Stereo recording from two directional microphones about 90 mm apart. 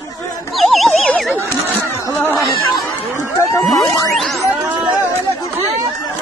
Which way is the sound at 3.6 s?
Centre (ahead or behind).